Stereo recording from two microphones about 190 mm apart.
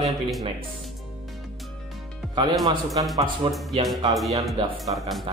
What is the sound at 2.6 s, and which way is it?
Speech, 20° right (ahead or behind).